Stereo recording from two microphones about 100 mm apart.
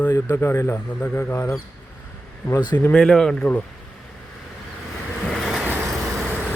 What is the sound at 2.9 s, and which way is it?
Speech, 5° left (ahead or behind).